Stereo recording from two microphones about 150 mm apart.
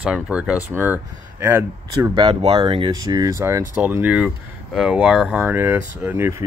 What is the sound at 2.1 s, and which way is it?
Speech, 35° right (ahead or behind).